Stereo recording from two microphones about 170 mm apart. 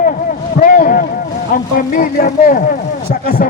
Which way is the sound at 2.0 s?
55° left (ahead or behind).